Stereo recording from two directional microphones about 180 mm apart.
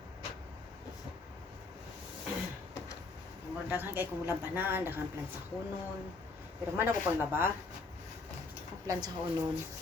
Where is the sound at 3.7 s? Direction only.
10° right (ahead or behind).